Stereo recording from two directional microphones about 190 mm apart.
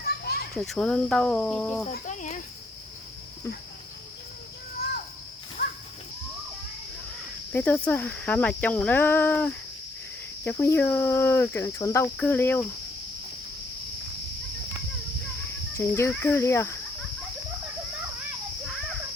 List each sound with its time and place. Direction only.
0.0 s children playing: 55° left (ahead or behind)
0.5 s speech: centre (ahead or behind)
1.9 s speech: 40° left (ahead or behind)
5.6 s a sound: 40° left (ahead or behind)
7.5 s speech: 10° left (ahead or behind)
15.8 s speech: 15° left (ahead or behind)